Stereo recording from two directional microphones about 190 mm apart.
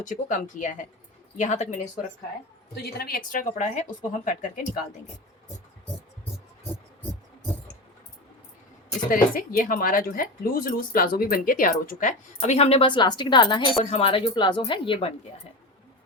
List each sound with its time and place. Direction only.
0.0 s speech: 40° left (ahead or behind)
2.8 s speech: 55° left (ahead or behind)
9.0 s speech: 50° left (ahead or behind); by 14.9 s 25° left (ahead or behind)